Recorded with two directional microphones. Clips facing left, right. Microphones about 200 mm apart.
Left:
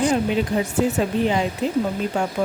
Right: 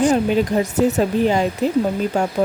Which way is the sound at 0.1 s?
40° right (ahead or behind).